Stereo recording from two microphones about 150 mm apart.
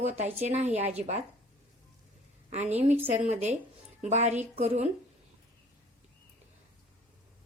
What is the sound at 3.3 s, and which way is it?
A woman's voice, 45° right (ahead or behind).